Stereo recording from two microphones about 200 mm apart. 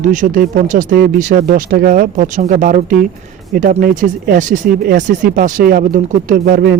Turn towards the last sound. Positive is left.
turn(degrees=-50)  # may be behind; listen again after turning